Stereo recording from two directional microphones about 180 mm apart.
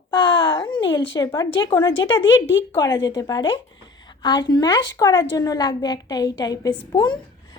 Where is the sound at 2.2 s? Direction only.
90° left.